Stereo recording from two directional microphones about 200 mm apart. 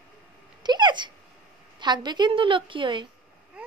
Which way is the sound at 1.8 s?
20° right (ahead or behind).